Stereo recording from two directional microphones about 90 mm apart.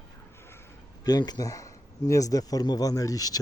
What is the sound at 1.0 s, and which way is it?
Speech, 50° left (ahead or behind).